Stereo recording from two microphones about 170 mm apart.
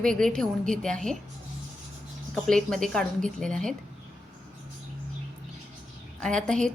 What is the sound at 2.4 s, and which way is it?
A woman's voice, 5° left (ahead or behind).